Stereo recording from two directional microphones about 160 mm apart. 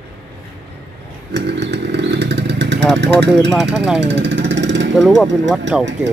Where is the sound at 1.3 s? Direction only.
90° right.